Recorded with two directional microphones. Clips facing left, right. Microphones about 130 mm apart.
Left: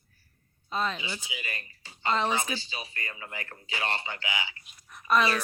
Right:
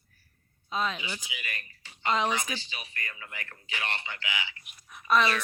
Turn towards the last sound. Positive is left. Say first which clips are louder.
# even
turn(degrees=5)  # may be behind; listen again after turning